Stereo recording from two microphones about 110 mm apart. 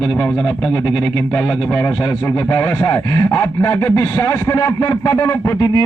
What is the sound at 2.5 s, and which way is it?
Speech, 25° left (ahead or behind).